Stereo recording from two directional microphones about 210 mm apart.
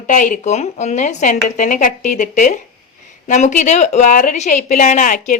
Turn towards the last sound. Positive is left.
turn(degrees=35)  # may be behind; listen again after turning